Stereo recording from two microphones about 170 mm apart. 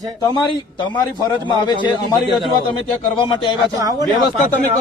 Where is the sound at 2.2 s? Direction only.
30° right (ahead or behind).